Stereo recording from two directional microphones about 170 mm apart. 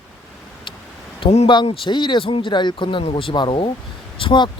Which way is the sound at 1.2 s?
35° left (ahead or behind).